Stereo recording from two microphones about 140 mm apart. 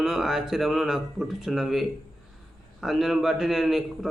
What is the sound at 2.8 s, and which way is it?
Speech, centre (ahead or behind).